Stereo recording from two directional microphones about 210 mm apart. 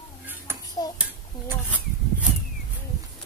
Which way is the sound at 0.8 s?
20° left (ahead or behind).